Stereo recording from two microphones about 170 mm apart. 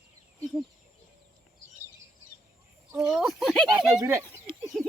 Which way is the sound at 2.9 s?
Centre (ahead or behind).